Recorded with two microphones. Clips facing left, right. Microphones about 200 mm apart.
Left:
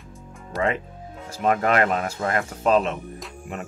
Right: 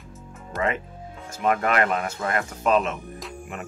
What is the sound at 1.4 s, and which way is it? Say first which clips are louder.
Speech: left 2 dB; 35° left (ahead or behind).